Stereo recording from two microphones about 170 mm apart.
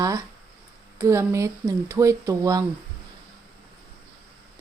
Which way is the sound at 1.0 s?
15° right (ahead or behind).